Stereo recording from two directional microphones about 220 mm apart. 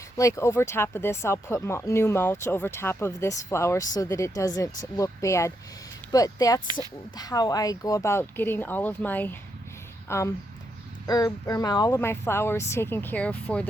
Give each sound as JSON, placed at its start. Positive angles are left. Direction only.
{"t": 0.2, "sound": "speech", "side_deg": 15}